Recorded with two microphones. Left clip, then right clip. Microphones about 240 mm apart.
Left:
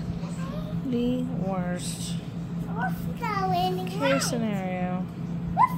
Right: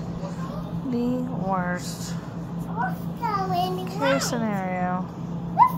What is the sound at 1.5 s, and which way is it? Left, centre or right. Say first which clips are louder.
Speech: right 8 dB; centre.